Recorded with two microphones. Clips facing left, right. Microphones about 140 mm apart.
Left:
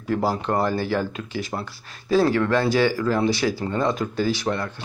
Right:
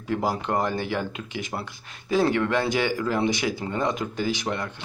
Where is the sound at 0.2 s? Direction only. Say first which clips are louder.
Left 2 dB; 15° right (ahead or behind).